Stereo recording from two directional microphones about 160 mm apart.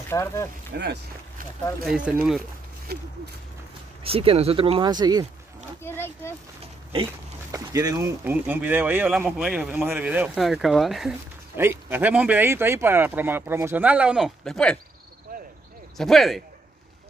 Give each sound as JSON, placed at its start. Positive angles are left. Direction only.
{"t": 0.1, "sound": "speech", "side_deg": 15}
{"t": 0.7, "sound": "speech", "side_deg": -85}
{"t": 1.9, "sound": "speech", "side_deg": -5}
{"t": 2.9, "sound": "speech", "side_deg": -80}
{"t": 4.0, "sound": "speech", "side_deg": -35}
{"t": 5.8, "sound": "a sound", "side_deg": 15}
{"t": 6.6, "sound": "pig", "side_deg": -35}
{"t": 7.5, "sound": "speech", "side_deg": -20}
{"t": 11.5, "sound": "speech", "side_deg": -15}
{"t": 15.3, "sound": "cricket", "side_deg": -65}
{"t": 16.0, "sound": "speech", "side_deg": 0}